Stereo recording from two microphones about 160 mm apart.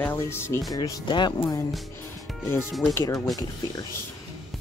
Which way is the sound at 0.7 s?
25° left (ahead or behind).